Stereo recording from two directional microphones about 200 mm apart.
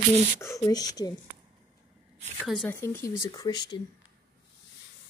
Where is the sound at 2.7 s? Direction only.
10° left (ahead or behind).